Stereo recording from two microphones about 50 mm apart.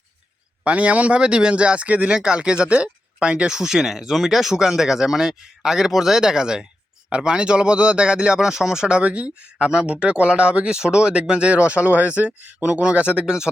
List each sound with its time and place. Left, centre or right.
0.6 s a man's voice: right